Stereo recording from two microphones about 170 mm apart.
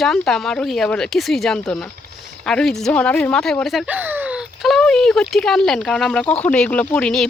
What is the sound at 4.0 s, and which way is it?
Speech, 10° right (ahead or behind).